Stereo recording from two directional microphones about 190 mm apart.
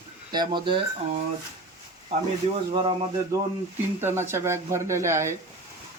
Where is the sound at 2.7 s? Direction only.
30° right (ahead or behind).